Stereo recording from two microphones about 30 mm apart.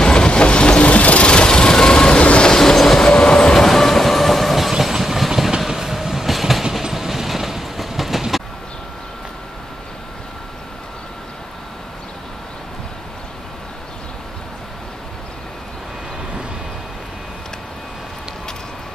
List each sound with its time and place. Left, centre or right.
0.0 s train: left
0.9 s vehicle: left
1.2 s train: left
2.5 s train: centre
3.0 s train: left; by 8.2 s centre